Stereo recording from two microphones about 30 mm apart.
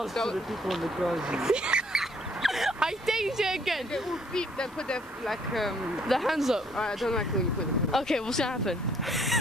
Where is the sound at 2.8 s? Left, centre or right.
Centre.